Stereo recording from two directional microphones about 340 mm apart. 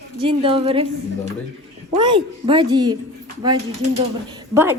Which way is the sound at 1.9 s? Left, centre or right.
Centre.